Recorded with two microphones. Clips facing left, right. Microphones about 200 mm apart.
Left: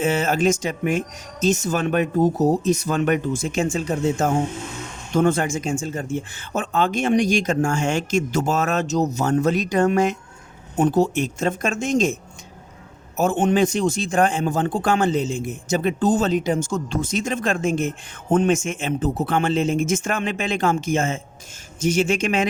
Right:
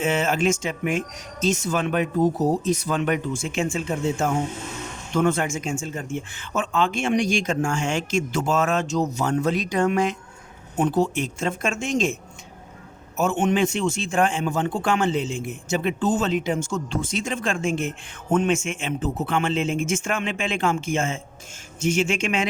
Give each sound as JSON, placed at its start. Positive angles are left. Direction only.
{"t": 0.0, "sound": "speech", "side_deg": 40}
{"t": 13.1, "sound": "speech", "side_deg": 35}